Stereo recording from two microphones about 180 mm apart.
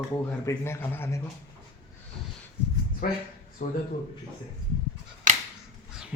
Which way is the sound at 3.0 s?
50° left (ahead or behind).